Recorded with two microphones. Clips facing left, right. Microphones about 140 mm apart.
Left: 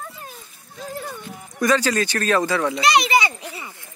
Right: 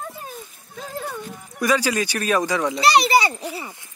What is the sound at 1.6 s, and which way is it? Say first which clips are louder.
Speech: left 1 dB; 10° right (ahead or behind).